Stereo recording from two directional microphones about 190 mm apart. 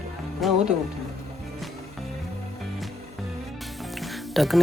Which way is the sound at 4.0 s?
Centre (ahead or behind).